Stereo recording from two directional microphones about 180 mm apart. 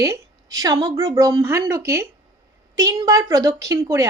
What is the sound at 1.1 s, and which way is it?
A woman's voice, 15° right (ahead or behind).